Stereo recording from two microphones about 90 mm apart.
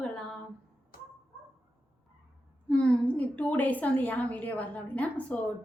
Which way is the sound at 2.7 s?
10° left (ahead or behind).